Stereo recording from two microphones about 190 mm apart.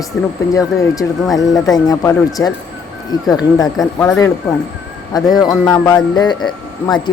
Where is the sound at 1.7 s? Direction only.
20° left (ahead or behind).